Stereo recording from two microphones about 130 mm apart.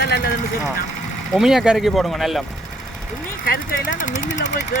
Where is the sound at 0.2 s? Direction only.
90° left.